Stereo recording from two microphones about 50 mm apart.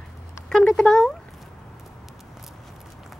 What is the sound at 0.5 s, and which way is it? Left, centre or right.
Speech, centre.